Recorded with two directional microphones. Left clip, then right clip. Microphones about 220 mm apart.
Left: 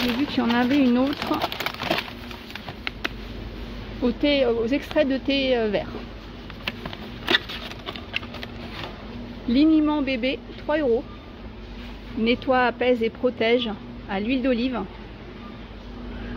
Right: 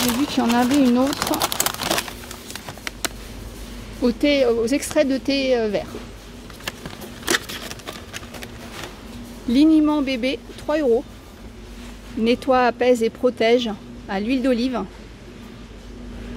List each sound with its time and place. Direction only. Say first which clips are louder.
0.0 s speech: right 3 dB; 15° right (ahead or behind)
1.4 s crumpling: right 4 dB; 25° right (ahead or behind)
4.0 s speech: right 3 dB; 15° right (ahead or behind)
7.2 s a sound: even; 10° right (ahead or behind)
9.5 s speech: right 3 dB; 15° right (ahead or behind)
12.3 s speech: right 3 dB; 15° right (ahead or behind)